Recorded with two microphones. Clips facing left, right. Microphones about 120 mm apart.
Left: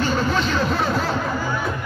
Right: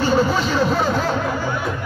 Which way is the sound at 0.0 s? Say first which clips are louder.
Right 3 dB; 5° right (ahead or behind).